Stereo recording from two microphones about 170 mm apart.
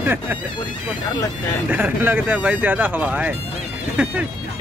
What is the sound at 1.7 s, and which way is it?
Speech, 10° right (ahead or behind).